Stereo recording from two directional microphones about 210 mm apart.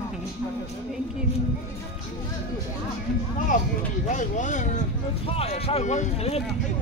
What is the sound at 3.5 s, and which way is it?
Speech, 35° left (ahead or behind).